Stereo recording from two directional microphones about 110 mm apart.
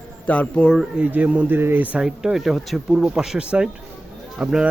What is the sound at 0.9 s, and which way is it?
Speech, 15° right (ahead or behind).